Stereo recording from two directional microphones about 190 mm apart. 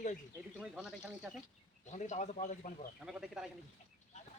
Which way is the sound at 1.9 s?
40° left (ahead or behind).